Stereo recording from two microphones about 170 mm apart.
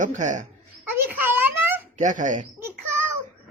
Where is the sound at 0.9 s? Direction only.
10° right (ahead or behind).